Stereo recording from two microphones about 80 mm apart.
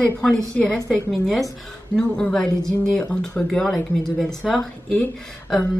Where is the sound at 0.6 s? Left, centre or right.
Centre.